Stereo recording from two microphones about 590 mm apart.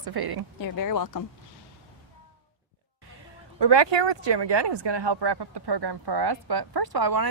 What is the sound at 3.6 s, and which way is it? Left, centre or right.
Speech, right.